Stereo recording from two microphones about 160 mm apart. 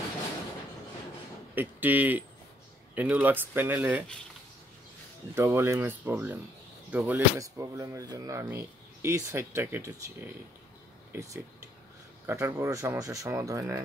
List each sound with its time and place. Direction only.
1.5 s a man's voice: 10° right (ahead or behind)
5.3 s speech: 15° right (ahead or behind)
7.3 s speech: 20° right (ahead or behind)